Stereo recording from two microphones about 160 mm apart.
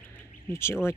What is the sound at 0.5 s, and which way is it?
Speech, 15° left (ahead or behind).